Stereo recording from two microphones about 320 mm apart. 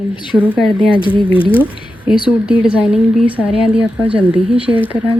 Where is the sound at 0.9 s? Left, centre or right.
Centre.